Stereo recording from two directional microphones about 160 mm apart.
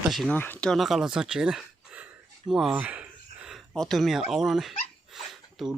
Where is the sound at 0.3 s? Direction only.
10° left (ahead or behind).